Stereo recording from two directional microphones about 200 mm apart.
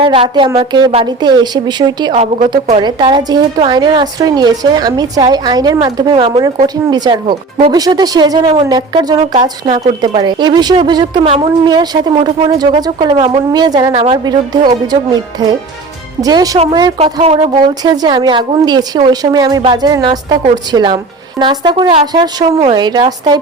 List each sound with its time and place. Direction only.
0.0 s a woman's voice: 25° right (ahead or behind)
10.0 s a woman's voice: 20° right (ahead or behind)
17.8 s a woman's voice: 20° right (ahead or behind)